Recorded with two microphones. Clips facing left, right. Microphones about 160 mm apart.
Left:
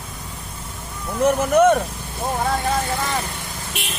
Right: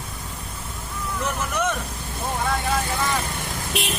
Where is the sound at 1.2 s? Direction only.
55° left (ahead or behind).